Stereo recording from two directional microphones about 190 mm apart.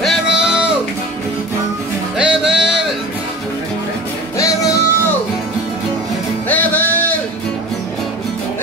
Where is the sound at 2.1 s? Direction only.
5° right (ahead or behind).